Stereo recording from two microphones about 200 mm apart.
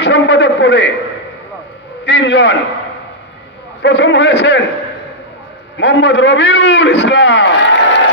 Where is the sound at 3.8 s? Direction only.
60° left (ahead or behind).